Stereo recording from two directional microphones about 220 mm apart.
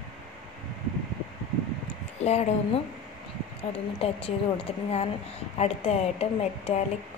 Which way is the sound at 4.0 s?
25° left (ahead or behind).